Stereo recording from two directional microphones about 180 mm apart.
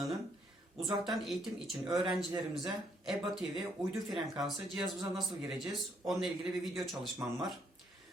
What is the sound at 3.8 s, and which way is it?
Speech, 15° right (ahead or behind).